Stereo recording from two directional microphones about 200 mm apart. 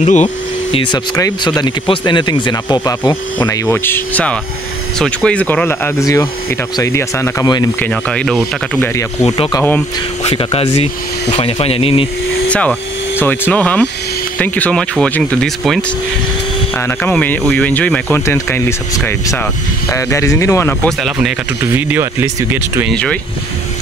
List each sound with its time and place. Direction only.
0.0 s speech: 35° left (ahead or behind)
1.1 s speech: 15° left (ahead or behind)
7.8 s speech: 5° left (ahead or behind)
9.2 s speech: 25° left (ahead or behind)
9.6 s speech: 10° left (ahead or behind)
10.2 s speech: 30° left (ahead or behind)
12.4 s vacuum cleaner: 5° left (ahead or behind)
13.2 s speech: 10° left (ahead or behind)
21.7 s speech: 10° right (ahead or behind)
22.8 s speech: 5° left (ahead or behind)